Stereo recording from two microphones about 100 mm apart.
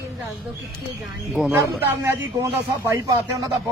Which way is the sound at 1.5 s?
20° right (ahead or behind).